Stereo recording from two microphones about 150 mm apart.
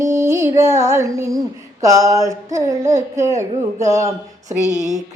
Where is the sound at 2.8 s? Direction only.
50° right (ahead or behind).